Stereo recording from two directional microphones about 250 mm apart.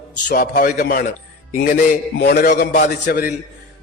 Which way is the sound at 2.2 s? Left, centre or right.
Left.